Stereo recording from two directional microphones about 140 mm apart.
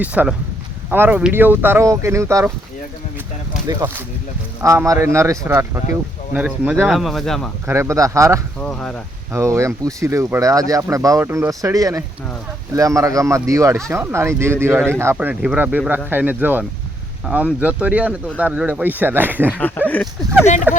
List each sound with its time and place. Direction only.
0.0 s speech: 10° right (ahead or behind)
3.7 s speech: 20° right (ahead or behind)
6.3 s speech: 10° right (ahead or behind)
7.7 s speech: 20° right (ahead or behind)
8.6 s speech: 5° left (ahead or behind)
9.3 s speech: 20° right (ahead or behind)
19.5 s speech: 10° left (ahead or behind)
20.7 s speech: 15° right (ahead or behind)